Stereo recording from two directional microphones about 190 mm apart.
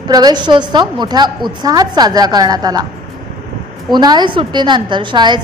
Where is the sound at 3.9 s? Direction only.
20° right (ahead or behind).